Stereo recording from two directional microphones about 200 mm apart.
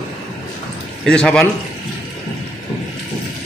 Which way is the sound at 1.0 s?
5° left (ahead or behind).